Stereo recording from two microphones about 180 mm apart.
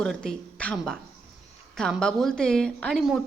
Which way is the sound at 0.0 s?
5° left (ahead or behind).